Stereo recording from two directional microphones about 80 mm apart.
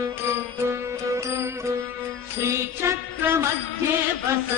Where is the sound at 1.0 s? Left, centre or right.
Right.